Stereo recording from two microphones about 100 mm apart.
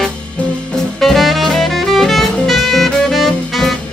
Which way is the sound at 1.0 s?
Centre (ahead or behind).